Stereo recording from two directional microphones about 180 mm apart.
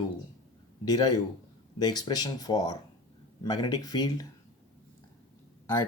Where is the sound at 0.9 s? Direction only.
20° left (ahead or behind).